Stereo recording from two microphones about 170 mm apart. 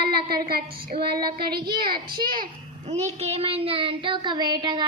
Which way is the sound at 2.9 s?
40° right (ahead or behind).